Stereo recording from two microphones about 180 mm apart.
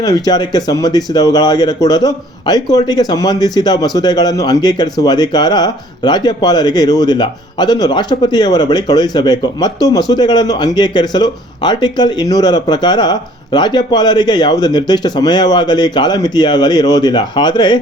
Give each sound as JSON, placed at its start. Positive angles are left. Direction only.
{"t": 0.0, "sound": "speech", "side_deg": 20}